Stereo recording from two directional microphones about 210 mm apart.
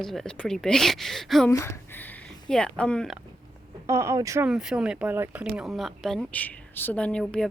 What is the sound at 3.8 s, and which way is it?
Speech, 15° right (ahead or behind).